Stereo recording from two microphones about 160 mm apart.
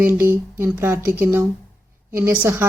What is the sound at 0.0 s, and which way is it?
Speech, 15° right (ahead or behind).